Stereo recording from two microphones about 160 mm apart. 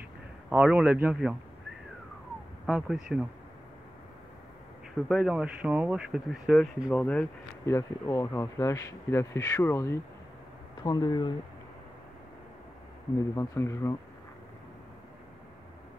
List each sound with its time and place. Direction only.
0.5 s a man's voice: 5° right (ahead or behind)
2.6 s speech: 5° right (ahead or behind)
5.0 s speech: 5° right (ahead or behind); by 11.3 s 25° left (ahead or behind)
13.3 s speech: 20° left (ahead or behind)